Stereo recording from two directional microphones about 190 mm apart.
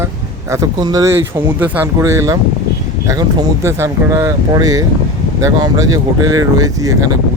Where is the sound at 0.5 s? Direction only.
20° right (ahead or behind).